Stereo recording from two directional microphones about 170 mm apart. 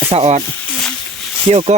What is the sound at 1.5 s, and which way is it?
Speech, 35° right (ahead or behind).